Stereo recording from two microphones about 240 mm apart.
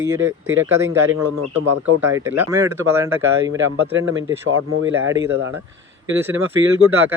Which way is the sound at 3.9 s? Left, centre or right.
Right.